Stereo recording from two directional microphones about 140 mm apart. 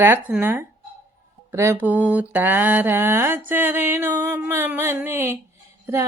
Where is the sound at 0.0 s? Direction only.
15° right (ahead or behind).